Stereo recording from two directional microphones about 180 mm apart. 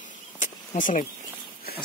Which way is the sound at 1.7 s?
60° left (ahead or behind).